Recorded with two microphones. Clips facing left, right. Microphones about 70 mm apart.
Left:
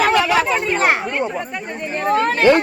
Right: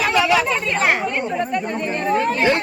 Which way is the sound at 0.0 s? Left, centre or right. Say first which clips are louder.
Left 2 dB; left.